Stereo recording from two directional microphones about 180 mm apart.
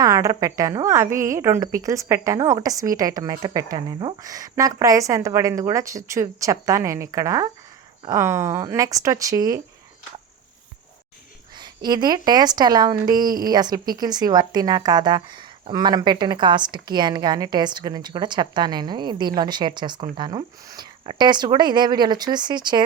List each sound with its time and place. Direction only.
0.0 s a woman's voice: 20° right (ahead or behind)
11.9 s speech: 25° right (ahead or behind)